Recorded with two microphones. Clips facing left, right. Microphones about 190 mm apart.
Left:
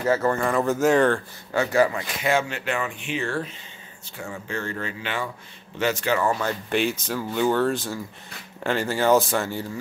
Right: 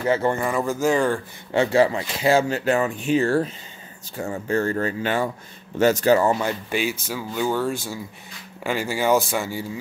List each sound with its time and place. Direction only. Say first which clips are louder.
0.1 s speech: right 1 dB; 20° right (ahead or behind)
0.4 s speech: left 1 dB; 5° right (ahead or behind)
1.5 s speech: right 3 dB; 25° right (ahead or behind)
6.2 s speech: right 3 dB; 20° right (ahead or behind)
6.7 s speech: left 1 dB; 5° right (ahead or behind)